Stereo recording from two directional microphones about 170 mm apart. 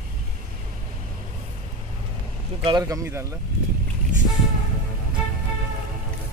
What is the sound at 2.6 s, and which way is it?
Speech, 20° right (ahead or behind).